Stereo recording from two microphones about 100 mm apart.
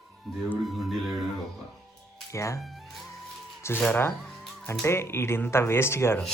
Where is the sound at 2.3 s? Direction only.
30° left (ahead or behind).